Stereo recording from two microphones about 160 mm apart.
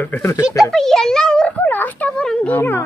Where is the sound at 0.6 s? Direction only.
Centre (ahead or behind).